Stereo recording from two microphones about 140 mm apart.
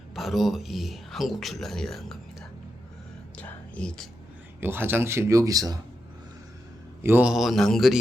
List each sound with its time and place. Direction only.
0.1 s speech: centre (ahead or behind)
3.3 s whispering: 5° left (ahead or behind)
4.6 s speech: 15° right (ahead or behind)
7.0 s speech: 15° right (ahead or behind)